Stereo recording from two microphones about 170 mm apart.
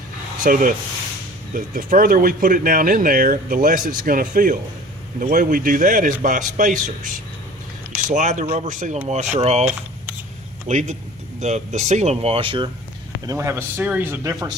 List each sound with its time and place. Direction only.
0.4 s speech: 55° right (ahead or behind)
10.7 s speech: 45° right (ahead or behind)
13.2 s speech: 15° right (ahead or behind)